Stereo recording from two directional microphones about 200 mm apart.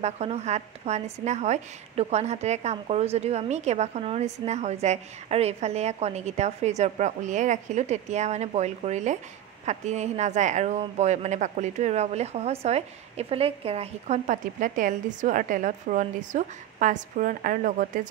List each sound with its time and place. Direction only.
0.0 s a woman's voice: 30° right (ahead or behind)